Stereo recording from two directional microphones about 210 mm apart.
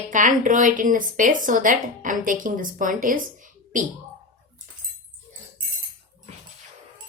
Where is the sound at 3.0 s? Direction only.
40° right (ahead or behind).